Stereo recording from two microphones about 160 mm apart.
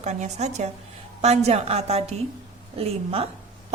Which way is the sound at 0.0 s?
45° right (ahead or behind).